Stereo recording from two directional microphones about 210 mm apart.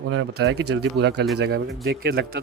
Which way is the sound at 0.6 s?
50° right (ahead or behind).